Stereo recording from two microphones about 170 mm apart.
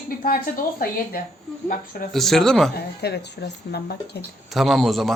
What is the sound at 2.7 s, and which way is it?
Speech, 70° left (ahead or behind).